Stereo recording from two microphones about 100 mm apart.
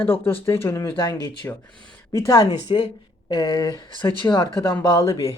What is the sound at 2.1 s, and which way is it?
Speech, 35° left (ahead or behind).